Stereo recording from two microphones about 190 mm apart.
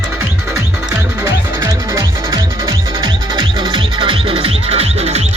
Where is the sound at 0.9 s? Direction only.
15° right (ahead or behind).